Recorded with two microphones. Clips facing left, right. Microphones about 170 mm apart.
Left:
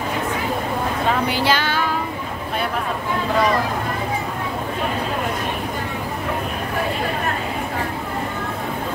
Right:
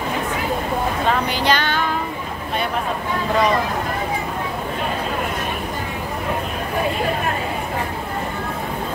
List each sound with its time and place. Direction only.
1.2 s music: 5° left (ahead or behind)